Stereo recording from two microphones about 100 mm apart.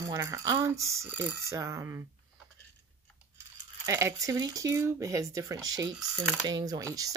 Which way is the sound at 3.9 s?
30° right (ahead or behind).